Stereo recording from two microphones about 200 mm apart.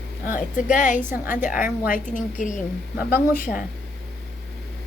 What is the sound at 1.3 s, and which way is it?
A woman's voice, 40° left (ahead or behind).